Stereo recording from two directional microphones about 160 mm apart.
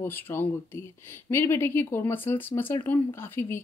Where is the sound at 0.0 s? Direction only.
15° left (ahead or behind).